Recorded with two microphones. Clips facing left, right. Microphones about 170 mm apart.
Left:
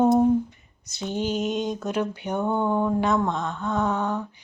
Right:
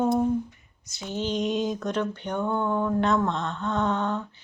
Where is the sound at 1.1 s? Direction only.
10° left (ahead or behind).